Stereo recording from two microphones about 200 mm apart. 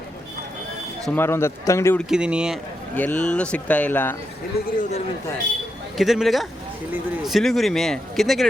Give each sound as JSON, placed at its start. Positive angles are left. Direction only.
{"t": 1.0, "sound": "speech", "side_deg": 10}
{"t": 2.0, "sound": "speech", "side_deg": -5}
{"t": 2.9, "sound": "speech", "side_deg": 10}
{"t": 4.8, "sound": "a man's voice", "side_deg": 35}
{"t": 6.0, "sound": "speech", "side_deg": 0}